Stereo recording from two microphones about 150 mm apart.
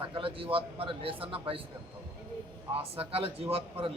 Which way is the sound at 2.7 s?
40° right (ahead or behind).